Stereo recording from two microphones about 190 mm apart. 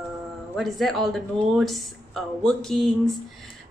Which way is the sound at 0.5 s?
Centre (ahead or behind).